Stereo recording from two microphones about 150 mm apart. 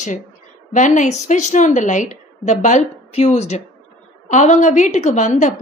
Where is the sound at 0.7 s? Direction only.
55° left (ahead or behind).